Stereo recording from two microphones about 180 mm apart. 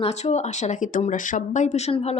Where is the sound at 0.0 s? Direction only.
40° left (ahead or behind).